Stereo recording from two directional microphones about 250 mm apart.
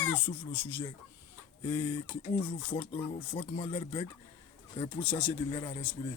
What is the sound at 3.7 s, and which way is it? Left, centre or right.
Speech, centre.